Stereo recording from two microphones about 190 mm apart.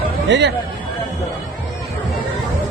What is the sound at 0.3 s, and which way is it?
Speech, 65° right (ahead or behind).